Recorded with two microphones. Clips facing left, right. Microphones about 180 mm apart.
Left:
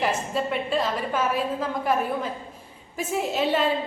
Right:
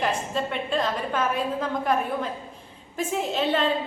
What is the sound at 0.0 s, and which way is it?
A woman's voice, 5° left (ahead or behind).